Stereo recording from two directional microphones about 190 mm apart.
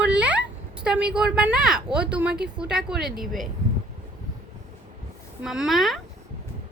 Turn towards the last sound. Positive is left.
turn(degrees=0)  # may be behind; listen again after turning